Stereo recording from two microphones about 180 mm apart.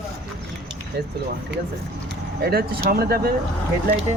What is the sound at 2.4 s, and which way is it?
Speech, 60° right (ahead or behind).